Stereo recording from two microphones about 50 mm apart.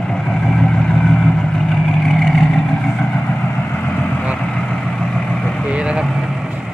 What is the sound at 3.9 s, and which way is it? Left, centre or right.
Vehicle, left.